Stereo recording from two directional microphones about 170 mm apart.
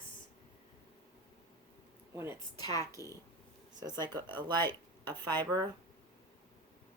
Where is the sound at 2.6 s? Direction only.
25° left (ahead or behind).